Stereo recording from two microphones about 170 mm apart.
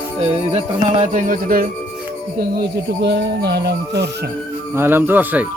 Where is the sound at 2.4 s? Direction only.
70° right (ahead or behind).